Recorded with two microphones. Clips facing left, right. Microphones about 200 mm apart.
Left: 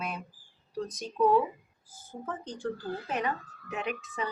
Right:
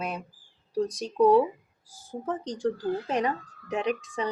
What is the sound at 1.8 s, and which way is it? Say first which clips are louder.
Speech: right 6 dB; 85° right.